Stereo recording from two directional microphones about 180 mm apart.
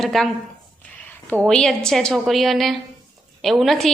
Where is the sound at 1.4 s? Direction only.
Centre (ahead or behind).